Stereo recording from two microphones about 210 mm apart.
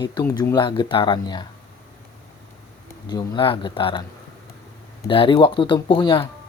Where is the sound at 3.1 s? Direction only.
20° left (ahead or behind).